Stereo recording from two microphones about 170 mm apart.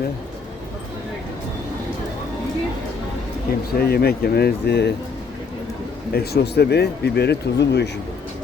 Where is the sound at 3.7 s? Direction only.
65° left (ahead or behind).